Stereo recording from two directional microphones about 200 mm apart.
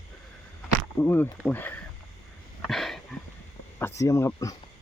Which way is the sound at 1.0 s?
10° left (ahead or behind).